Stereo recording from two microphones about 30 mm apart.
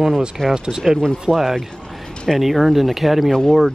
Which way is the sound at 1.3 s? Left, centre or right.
Left.